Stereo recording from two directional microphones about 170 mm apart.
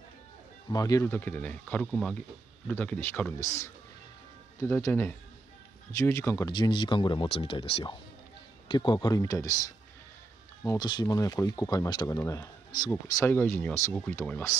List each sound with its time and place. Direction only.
0.7 s speech: 20° left (ahead or behind)
10.8 s speech: 25° left (ahead or behind)